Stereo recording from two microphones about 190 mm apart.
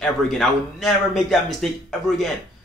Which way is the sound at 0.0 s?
Centre (ahead or behind).